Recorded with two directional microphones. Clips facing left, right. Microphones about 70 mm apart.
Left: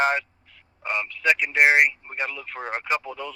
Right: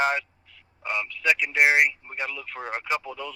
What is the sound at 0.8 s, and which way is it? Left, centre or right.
Speech, left.